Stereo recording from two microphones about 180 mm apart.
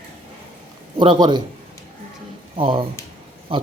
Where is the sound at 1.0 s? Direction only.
25° right (ahead or behind).